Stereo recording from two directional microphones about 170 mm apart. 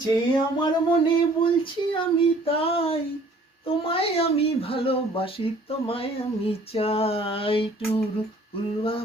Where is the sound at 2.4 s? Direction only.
35° left (ahead or behind).